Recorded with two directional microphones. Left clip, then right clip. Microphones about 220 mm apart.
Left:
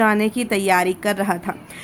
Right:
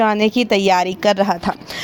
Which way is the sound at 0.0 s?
30° right (ahead or behind).